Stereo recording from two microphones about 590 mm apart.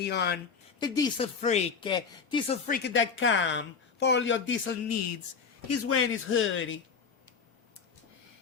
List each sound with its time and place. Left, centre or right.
0.0 s speech: centre